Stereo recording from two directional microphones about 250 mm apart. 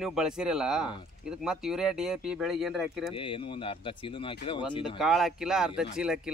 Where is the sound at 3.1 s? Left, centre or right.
Left.